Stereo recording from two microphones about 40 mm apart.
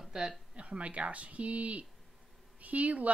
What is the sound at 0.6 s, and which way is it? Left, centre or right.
A woman's voice, right.